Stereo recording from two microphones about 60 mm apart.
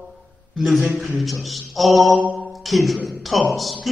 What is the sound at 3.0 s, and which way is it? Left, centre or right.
Speech, centre.